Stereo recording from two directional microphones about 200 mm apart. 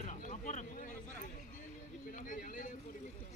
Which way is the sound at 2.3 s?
40° left (ahead or behind).